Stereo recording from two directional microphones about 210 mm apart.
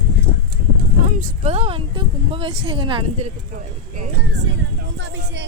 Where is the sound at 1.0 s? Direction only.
35° right (ahead or behind).